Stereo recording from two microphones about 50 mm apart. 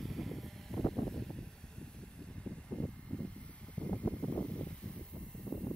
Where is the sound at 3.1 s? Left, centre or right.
Left.